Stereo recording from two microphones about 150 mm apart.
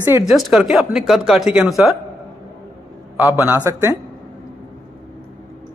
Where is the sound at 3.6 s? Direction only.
20° right (ahead or behind).